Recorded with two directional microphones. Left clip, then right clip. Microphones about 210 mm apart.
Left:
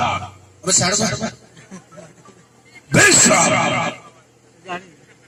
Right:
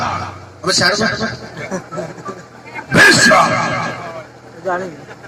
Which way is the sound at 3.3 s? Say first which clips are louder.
Right 4 dB; 35° left (ahead or behind).